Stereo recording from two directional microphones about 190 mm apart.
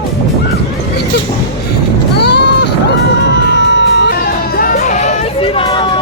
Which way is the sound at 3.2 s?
65° left (ahead or behind).